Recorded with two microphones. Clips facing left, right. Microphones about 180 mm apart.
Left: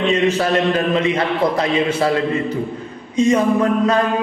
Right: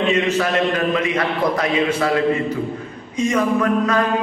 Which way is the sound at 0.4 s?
30° left (ahead or behind).